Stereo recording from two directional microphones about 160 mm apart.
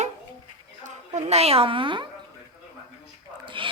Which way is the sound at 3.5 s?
30° right (ahead or behind).